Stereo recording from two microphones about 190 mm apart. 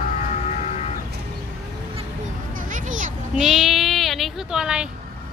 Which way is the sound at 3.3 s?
Centre (ahead or behind).